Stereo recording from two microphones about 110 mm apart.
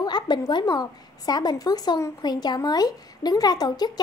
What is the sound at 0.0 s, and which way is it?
A woman's voice, 40° left (ahead or behind).